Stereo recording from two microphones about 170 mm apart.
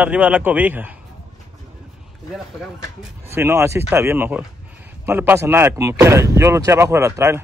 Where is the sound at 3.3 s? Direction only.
15° right (ahead or behind).